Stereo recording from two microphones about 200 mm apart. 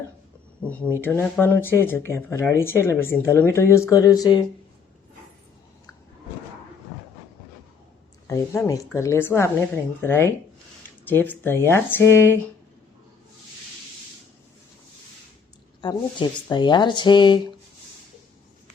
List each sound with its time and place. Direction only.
1.0 s speech: 10° left (ahead or behind)
8.3 s speech: 15° left (ahead or behind)
15.8 s speech: 25° left (ahead or behind)